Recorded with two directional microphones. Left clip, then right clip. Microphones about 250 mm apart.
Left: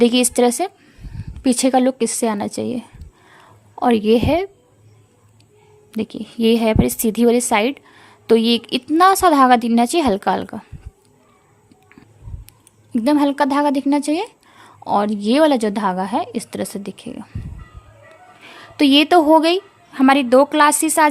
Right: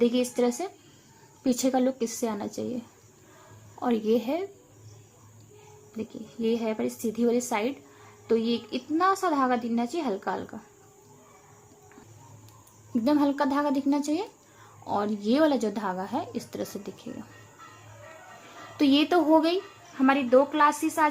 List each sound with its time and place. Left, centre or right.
0.0 s a woman's voice: left
6.0 s a woman's voice: left
12.9 s a woman's voice: left
18.4 s a woman's voice: left